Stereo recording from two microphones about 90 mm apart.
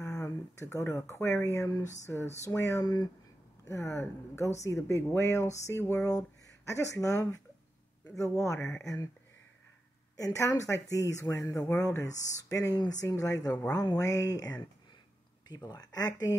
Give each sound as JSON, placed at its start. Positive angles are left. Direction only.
{"t": 0.0, "sound": "speech", "side_deg": 30}
{"t": 2.8, "sound": "speech", "side_deg": 50}
{"t": 3.6, "sound": "speech", "side_deg": 30}
{"t": 10.1, "sound": "speech", "side_deg": 35}